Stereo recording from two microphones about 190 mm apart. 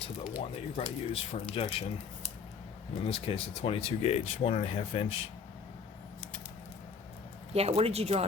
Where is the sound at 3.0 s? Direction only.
30° left (ahead or behind).